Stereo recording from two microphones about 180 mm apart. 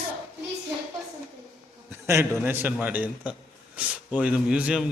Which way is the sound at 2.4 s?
10° right (ahead or behind).